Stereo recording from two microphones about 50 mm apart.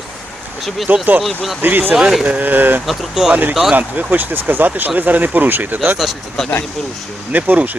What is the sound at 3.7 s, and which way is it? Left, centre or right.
Speech, right.